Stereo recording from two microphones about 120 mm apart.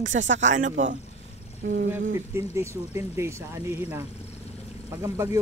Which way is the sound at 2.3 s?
20° right (ahead or behind).